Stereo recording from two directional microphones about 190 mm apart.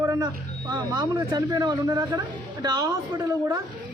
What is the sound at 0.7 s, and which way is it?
Speech, 20° right (ahead or behind).